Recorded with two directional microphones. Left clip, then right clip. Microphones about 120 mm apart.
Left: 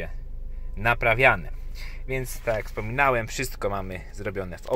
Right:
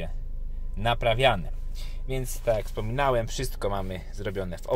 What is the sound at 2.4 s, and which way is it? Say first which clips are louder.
Speech: right 3 dB; 15° right (ahead or behind).